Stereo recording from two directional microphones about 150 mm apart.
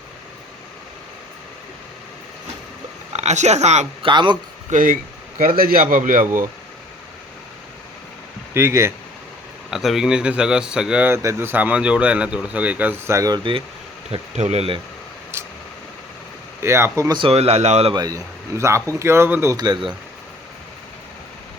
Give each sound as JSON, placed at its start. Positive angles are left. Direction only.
{"t": 3.1, "sound": "speech", "side_deg": -50}
{"t": 4.1, "sound": "speech", "side_deg": -30}
{"t": 4.7, "sound": "speech", "side_deg": -65}
{"t": 5.4, "sound": "a man's voice", "side_deg": -75}
{"t": 8.5, "sound": "speech", "side_deg": -15}
{"t": 9.6, "sound": "speech", "side_deg": 0}
{"t": 14.1, "sound": "speech", "side_deg": -45}
{"t": 16.6, "sound": "speech", "side_deg": -15}
{"t": 17.2, "sound": "speech", "side_deg": -40}
{"t": 17.9, "sound": "a man's voice", "side_deg": -25}